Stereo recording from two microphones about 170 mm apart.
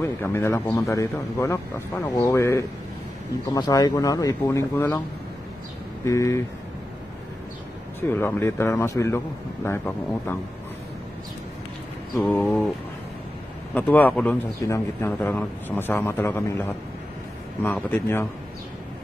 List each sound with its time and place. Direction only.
0.0 s a man's voice: 15° left (ahead or behind)
6.0 s a man's voice: 15° left (ahead or behind)
8.1 s a man's voice: 10° left (ahead or behind)
12.2 s a man's voice: 5° left (ahead or behind)
13.7 s a man's voice: 10° left (ahead or behind)